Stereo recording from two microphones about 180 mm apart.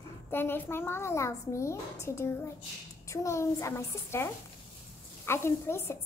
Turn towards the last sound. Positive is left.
turn(degrees=15)  # may be behind; listen again after turning